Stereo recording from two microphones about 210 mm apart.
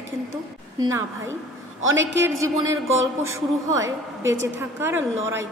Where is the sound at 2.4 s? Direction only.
15° right (ahead or behind).